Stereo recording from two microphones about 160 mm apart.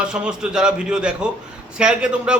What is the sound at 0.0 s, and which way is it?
A man's voice, 5° right (ahead or behind).